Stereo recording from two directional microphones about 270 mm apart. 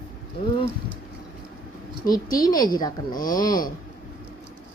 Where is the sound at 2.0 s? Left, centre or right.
Centre.